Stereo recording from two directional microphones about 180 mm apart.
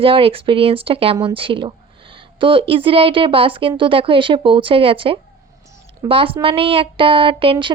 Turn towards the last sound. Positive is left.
turn(degrees=-30)  # may be behind; listen again after turning